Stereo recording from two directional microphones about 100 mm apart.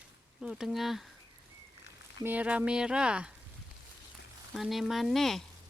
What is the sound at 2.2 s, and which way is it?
Speech, 15° right (ahead or behind).